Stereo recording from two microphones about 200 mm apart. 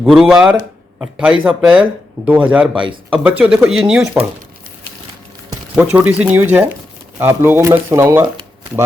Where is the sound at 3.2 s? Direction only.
5° right (ahead or behind).